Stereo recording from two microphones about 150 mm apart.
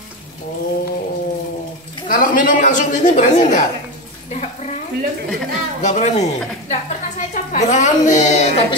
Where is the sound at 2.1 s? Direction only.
65° left (ahead or behind).